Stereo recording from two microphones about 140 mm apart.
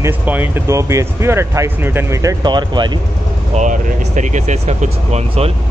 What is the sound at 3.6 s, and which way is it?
Speech, 65° right (ahead or behind).